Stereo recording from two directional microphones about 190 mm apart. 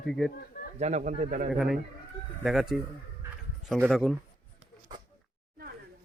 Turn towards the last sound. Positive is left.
turn(degrees=0)  # may be behind; listen again after turning